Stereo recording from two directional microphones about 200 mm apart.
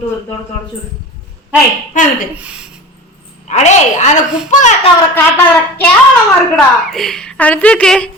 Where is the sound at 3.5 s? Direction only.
35° left (ahead or behind).